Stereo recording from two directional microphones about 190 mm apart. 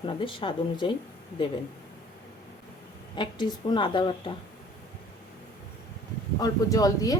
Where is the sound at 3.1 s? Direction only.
25° left (ahead or behind).